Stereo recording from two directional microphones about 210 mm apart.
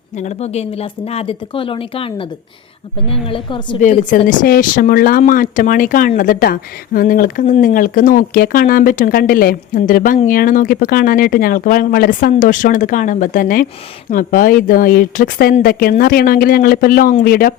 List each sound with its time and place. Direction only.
0.2 s speech: 30° left (ahead or behind)
3.8 s speech: 40° left (ahead or behind)